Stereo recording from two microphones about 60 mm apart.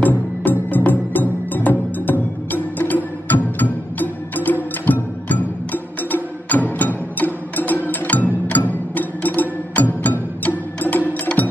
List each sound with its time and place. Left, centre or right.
0.0 s music: left
11.3 s music: centre